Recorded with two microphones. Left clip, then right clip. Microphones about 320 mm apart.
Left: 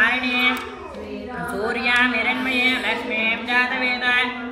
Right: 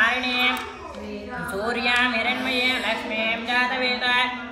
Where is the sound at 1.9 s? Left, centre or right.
Right.